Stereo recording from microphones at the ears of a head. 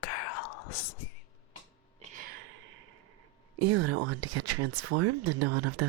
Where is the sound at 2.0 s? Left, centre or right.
Right.